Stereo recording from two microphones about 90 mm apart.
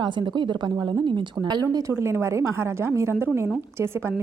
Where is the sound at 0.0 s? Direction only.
60° right (ahead or behind).